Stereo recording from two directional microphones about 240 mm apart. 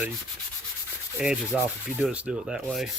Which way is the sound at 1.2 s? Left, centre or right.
Centre.